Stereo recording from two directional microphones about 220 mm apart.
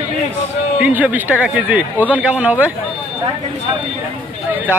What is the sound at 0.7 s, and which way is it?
A man's voice, 5° right (ahead or behind).